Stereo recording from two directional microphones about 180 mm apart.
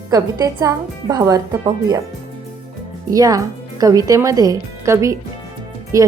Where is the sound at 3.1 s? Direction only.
20° right (ahead or behind).